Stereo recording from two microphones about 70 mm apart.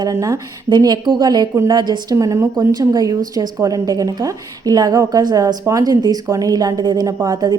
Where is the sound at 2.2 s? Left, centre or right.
Right.